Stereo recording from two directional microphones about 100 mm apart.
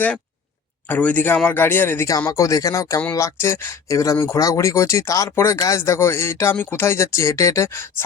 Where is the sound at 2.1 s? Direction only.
35° left (ahead or behind).